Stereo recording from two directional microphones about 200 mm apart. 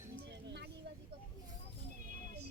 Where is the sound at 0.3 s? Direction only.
60° right (ahead or behind).